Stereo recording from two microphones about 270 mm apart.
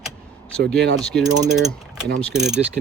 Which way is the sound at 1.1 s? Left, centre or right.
Centre.